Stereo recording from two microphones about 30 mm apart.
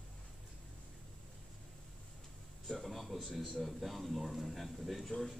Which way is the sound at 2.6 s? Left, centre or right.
Centre.